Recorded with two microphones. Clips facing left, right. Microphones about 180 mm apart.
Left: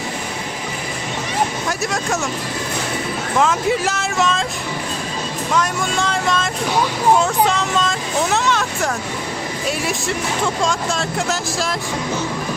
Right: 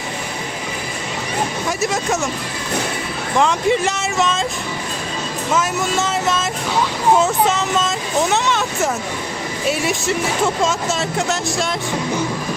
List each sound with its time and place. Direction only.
1.8 s speech: centre (ahead or behind)
3.3 s speech: centre (ahead or behind)
5.5 s speech: 5° right (ahead or behind)
7.2 s vehicle: centre (ahead or behind)
9.6 s speech: centre (ahead or behind)